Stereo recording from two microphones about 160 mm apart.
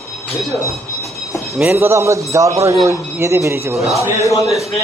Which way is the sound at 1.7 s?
15° right (ahead or behind).